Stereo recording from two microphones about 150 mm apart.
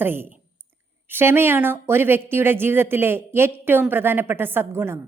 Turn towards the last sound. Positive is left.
turn(degrees=-15)  # may be behind; listen again after turning